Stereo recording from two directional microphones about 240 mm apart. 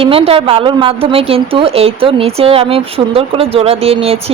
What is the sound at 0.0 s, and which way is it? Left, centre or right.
A woman's voice, right.